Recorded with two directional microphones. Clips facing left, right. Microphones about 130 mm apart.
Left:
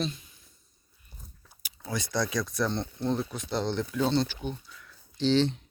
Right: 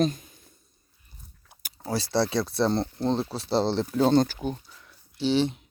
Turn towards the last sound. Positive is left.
turn(degrees=-10)  # may be behind; listen again after turning